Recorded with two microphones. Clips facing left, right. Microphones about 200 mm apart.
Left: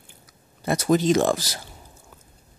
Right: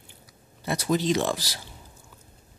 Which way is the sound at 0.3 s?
45° left (ahead or behind).